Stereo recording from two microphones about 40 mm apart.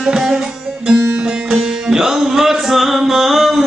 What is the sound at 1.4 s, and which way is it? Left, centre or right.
Music, centre.